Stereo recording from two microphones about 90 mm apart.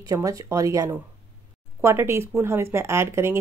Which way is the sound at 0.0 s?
40° right (ahead or behind).